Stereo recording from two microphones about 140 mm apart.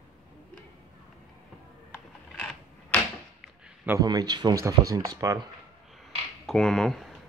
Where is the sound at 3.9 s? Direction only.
25° right (ahead or behind).